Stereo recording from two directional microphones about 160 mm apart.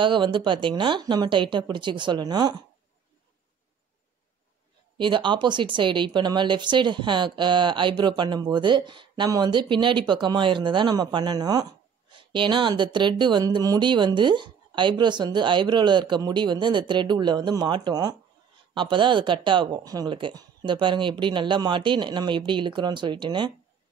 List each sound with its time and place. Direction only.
0.0 s speech: 30° right (ahead or behind)
4.9 s speech: 30° right (ahead or behind)